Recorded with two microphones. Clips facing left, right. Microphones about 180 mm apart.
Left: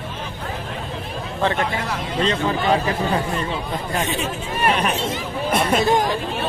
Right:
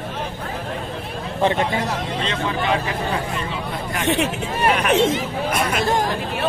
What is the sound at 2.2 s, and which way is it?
Speech, 35° left (ahead or behind).